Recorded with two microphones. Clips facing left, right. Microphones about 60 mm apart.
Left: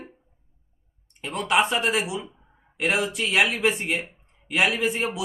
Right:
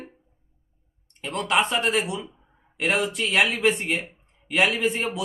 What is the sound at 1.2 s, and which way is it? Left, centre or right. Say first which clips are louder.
Speech: left 1 dB; centre.